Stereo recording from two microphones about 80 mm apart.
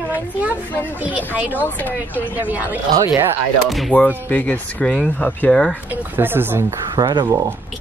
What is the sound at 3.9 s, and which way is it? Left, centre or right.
Speech, left.